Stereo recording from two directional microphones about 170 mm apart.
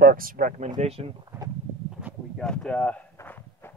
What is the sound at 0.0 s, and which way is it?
Speech, 55° right (ahead or behind).